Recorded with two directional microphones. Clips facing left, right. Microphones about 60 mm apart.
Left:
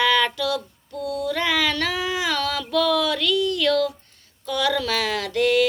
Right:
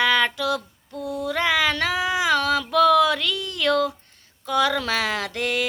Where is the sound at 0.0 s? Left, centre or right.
Right.